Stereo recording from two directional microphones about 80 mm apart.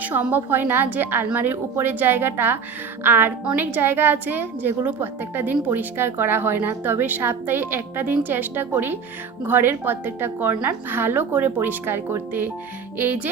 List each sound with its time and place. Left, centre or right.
0.0 s a woman's voice: right